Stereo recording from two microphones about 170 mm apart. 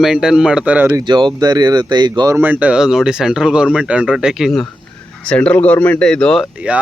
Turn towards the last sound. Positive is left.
turn(degrees=-5)  # may be behind; listen again after turning